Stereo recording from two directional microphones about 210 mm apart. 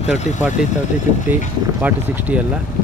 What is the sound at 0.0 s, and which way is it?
Speech, 35° left (ahead or behind).